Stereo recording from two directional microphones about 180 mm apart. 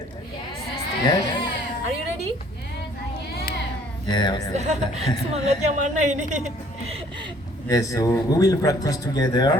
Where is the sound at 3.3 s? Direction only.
60° left (ahead or behind).